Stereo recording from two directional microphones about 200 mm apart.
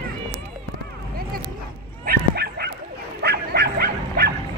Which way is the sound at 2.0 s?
50° right (ahead or behind).